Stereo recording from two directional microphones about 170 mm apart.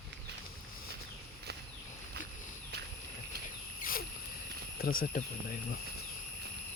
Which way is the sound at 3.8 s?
55° left (ahead or behind).